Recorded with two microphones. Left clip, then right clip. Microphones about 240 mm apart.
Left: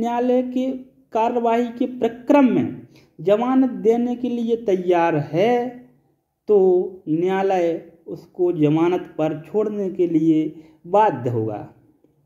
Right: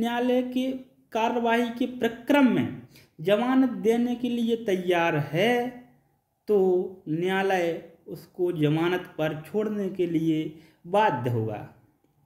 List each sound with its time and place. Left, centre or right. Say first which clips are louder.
0.0 s speech: left 6 dB; centre